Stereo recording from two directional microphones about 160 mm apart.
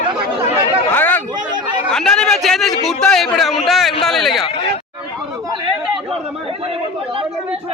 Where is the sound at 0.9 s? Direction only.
10° left (ahead or behind).